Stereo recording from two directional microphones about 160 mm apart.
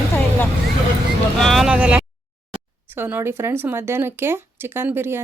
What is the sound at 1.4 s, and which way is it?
Vehicle, centre (ahead or behind).